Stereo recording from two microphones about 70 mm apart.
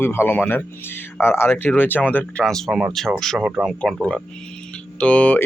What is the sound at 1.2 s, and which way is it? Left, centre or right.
Speech, left.